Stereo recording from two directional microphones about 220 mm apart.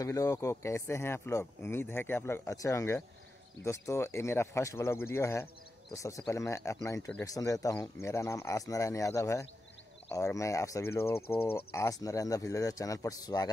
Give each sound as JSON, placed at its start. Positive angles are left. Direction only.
{"t": 0.0, "sound": "speech", "side_deg": 15}
{"t": 11.1, "sound": "speech", "side_deg": 25}
{"t": 11.5, "sound": "speech", "side_deg": 10}